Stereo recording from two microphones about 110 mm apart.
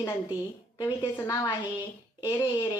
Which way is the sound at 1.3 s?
40° left (ahead or behind).